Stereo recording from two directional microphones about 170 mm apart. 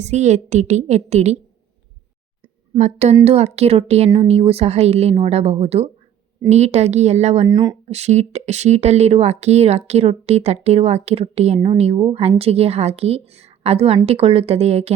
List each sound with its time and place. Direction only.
0.0 s a woman's voice: 40° right (ahead or behind)
2.7 s a woman's voice: 40° right (ahead or behind)
7.4 s speech: 25° right (ahead or behind)
7.9 s speech: 40° right (ahead or behind)